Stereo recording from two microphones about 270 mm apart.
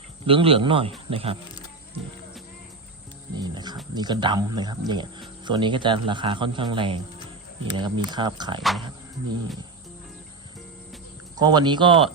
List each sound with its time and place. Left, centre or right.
0.3 s speech: centre
3.3 s music: centre
3.9 s speech: centre
11.3 s speech: centre